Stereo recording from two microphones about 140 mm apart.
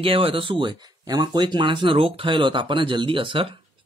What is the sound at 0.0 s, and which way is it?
Speech, 40° right (ahead or behind).